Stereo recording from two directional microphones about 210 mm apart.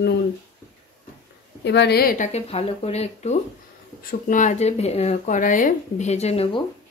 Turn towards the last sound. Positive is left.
turn(degrees=30)  # may be behind; listen again after turning